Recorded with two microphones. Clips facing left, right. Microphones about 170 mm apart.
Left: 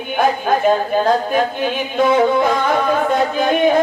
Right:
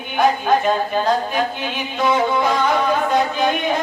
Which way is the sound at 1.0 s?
50° left (ahead or behind).